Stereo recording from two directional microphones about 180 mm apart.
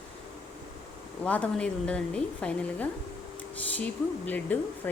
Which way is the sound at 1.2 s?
5° left (ahead or behind).